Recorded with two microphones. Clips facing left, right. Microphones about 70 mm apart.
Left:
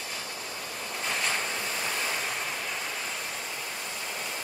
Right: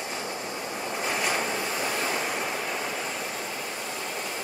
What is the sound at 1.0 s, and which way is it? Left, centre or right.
Waves, centre.